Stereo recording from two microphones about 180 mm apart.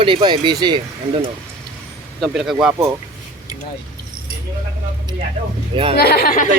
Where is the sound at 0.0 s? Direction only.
25° right (ahead or behind).